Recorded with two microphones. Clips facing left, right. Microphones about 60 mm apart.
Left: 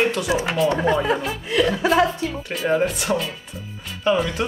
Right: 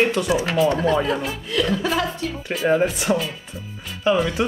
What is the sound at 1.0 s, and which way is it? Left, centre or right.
Speech, centre.